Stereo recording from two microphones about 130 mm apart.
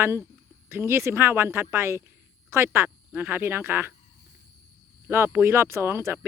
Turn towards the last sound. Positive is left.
turn(degrees=-20)  # may be behind; listen again after turning